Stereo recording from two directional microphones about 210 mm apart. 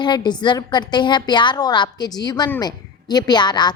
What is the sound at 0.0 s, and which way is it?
A woman's voice, 20° left (ahead or behind).